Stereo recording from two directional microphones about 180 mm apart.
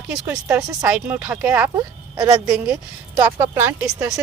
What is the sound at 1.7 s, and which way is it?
Speech, 20° right (ahead or behind).